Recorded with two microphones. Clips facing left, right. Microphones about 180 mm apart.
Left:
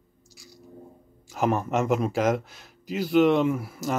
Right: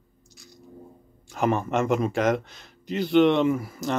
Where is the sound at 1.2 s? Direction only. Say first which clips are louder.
Right 1 dB; 5° left (ahead or behind).